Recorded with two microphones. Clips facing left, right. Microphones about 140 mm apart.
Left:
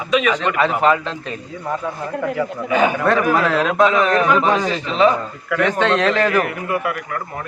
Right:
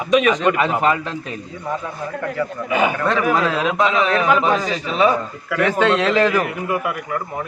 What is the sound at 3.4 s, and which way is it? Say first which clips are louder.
A man's voice: left 3 dB; 10° right (ahead or behind).